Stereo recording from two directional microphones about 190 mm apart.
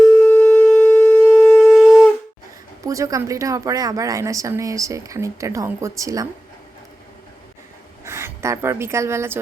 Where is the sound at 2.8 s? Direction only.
15° right (ahead or behind).